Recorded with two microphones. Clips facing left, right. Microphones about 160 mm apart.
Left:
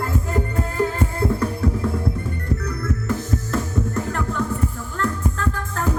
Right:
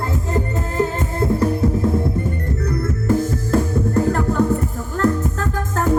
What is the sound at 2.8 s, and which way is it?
Music, 30° right (ahead or behind).